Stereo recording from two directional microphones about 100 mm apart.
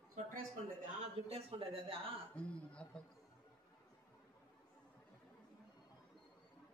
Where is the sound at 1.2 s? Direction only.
70° right (ahead or behind).